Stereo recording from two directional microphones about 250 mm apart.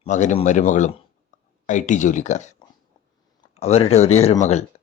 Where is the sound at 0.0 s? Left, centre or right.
Left.